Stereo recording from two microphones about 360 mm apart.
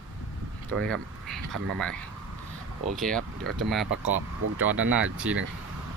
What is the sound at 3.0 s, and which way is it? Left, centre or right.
Speech, centre.